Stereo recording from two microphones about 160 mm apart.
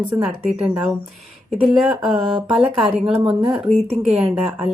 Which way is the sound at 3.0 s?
35° right (ahead or behind).